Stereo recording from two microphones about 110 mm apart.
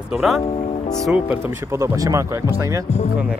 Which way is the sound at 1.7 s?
30° right (ahead or behind).